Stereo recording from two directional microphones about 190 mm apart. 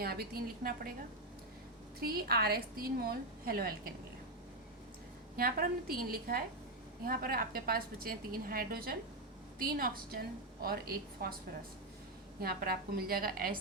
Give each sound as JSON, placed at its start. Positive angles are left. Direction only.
{"t": 0.0, "sound": "a woman's voice", "side_deg": -55}
{"t": 2.0, "sound": "a woman's voice", "side_deg": -55}
{"t": 5.4, "sound": "a woman's voice", "side_deg": -50}
{"t": 12.4, "sound": "a woman's voice", "side_deg": -50}